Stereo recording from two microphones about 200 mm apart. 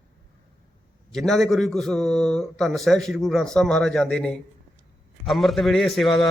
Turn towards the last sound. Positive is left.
turn(degrees=0)  # may be behind; listen again after turning